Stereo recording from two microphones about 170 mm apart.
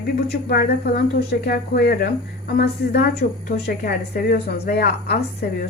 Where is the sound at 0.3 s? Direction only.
70° left (ahead or behind).